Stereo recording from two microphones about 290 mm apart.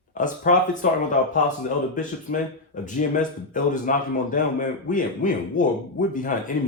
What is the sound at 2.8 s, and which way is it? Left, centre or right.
Speech, left.